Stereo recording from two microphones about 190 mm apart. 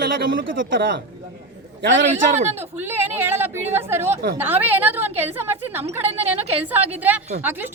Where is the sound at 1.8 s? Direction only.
80° right.